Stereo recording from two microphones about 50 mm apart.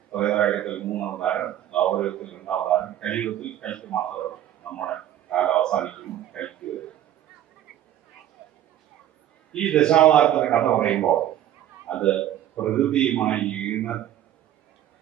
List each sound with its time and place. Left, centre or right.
0.1 s a man's voice: centre
6.4 s a sound: centre
9.5 s a man's voice: centre